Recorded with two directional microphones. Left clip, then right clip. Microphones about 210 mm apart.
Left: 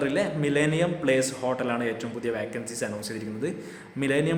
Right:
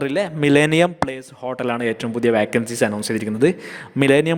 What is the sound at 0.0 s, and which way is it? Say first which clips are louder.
A man's voice: right 6 dB; 50° right (ahead or behind).